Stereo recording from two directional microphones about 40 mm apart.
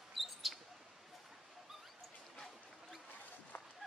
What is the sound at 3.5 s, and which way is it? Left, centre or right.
Run, left.